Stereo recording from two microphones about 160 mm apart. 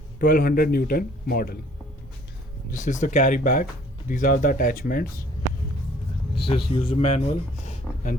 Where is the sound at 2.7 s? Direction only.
50° left (ahead or behind).